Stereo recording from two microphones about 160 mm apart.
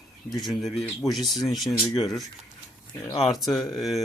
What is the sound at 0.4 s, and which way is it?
Speech, centre (ahead or behind).